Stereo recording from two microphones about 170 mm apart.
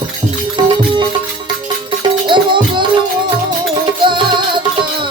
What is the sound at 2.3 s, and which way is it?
Music, 30° right (ahead or behind).